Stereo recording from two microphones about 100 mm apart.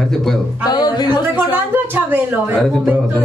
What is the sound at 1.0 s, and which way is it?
Speech, 20° right (ahead or behind).